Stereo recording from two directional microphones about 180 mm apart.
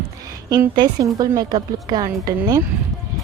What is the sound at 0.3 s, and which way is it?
A woman's voice, 20° right (ahead or behind).